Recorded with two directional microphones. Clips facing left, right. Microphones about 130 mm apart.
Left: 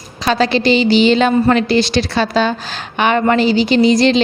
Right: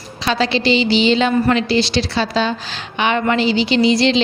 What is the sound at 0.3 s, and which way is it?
A woman's voice, 45° left (ahead or behind).